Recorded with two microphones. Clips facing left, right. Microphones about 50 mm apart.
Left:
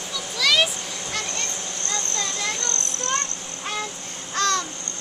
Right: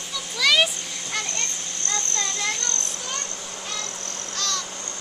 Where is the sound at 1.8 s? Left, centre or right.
Centre.